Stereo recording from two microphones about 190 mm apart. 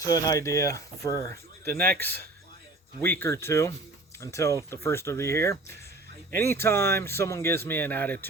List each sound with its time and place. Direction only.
0.0 s speech: 20° left (ahead or behind)